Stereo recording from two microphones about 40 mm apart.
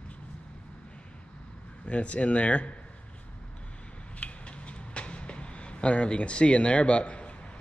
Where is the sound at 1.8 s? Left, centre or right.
Left.